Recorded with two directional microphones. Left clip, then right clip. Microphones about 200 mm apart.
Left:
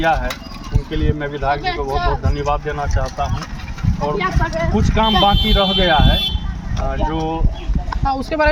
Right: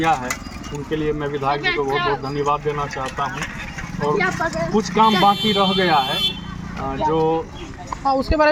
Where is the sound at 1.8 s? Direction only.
15° left (ahead or behind).